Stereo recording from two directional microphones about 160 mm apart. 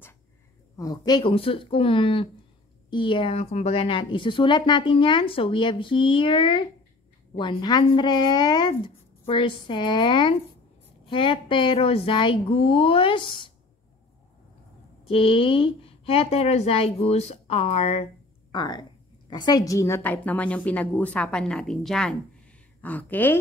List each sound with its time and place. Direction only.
0.7 s a woman's voice: 25° left (ahead or behind)
15.0 s a woman's voice: 35° left (ahead or behind)
18.5 s a woman's voice: 25° left (ahead or behind)